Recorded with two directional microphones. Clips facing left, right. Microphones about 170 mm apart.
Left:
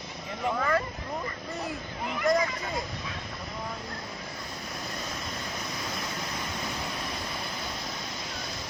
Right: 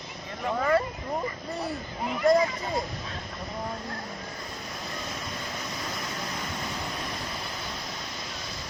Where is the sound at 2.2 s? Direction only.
30° right (ahead or behind).